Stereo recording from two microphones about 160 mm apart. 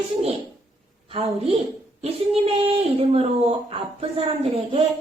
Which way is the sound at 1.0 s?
35° right (ahead or behind).